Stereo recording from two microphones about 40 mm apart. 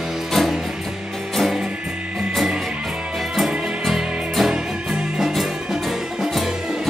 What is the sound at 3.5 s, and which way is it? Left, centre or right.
Music, centre.